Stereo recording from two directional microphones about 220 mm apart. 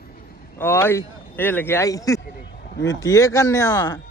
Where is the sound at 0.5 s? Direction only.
10° left (ahead or behind).